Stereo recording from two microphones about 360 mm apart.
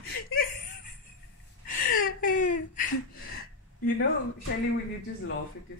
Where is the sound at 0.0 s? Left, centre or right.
Left.